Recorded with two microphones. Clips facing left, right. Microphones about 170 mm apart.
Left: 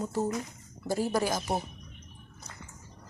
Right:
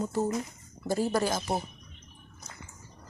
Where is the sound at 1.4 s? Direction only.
Centre (ahead or behind).